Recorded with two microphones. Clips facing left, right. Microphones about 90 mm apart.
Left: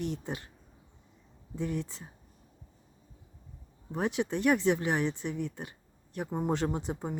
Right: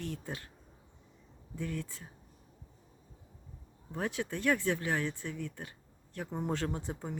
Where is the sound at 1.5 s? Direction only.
20° left (ahead or behind).